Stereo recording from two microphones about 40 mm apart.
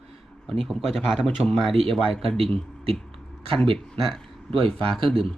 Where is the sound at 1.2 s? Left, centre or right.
Centre.